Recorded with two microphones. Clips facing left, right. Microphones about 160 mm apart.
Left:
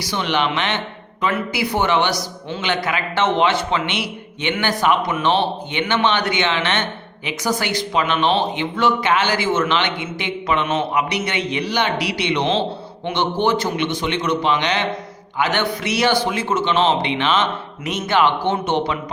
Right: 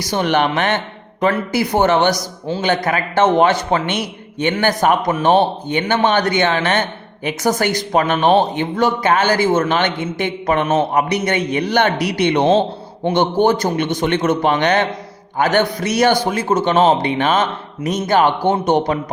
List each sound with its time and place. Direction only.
0.0 s speech: 45° right (ahead or behind)